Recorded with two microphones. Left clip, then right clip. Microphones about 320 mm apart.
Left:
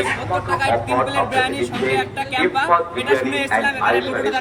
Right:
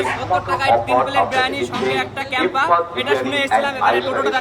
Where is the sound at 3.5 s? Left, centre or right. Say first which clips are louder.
Right 1 dB; centre.